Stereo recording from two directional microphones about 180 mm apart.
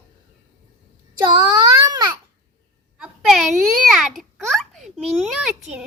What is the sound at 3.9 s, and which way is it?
A child's voice, centre (ahead or behind).